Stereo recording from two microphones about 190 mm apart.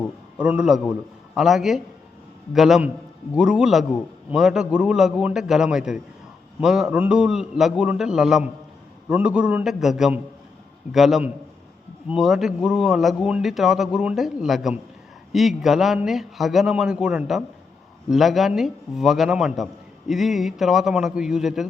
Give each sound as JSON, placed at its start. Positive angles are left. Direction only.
{"t": 0.3, "sound": "speech", "side_deg": -5}